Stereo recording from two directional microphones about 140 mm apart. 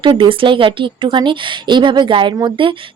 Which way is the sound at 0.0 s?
35° right (ahead or behind).